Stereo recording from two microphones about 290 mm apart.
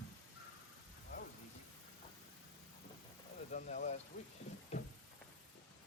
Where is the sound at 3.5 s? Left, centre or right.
Left.